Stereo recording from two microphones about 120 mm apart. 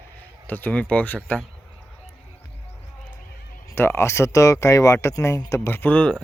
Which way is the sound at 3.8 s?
20° left (ahead or behind).